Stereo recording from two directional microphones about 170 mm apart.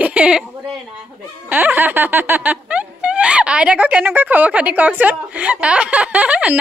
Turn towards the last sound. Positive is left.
turn(degrees=-10)  # may be behind; listen again after turning